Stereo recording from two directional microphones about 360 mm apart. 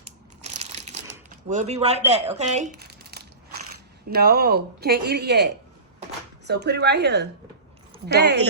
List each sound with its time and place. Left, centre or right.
0.4 s crushing: centre
1.5 s speech: centre